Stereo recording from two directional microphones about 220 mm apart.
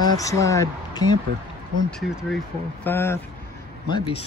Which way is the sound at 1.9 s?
Centre (ahead or behind).